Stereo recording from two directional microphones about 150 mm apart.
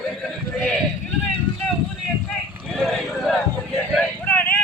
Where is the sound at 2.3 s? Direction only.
Centre (ahead or behind).